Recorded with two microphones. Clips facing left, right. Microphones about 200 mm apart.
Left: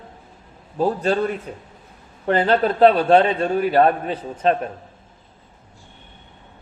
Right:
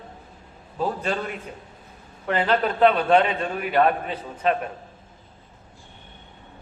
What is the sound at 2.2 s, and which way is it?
A man's voice, 35° left (ahead or behind).